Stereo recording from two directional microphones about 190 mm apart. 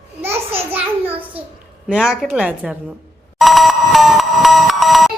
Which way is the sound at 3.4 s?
Centre (ahead or behind).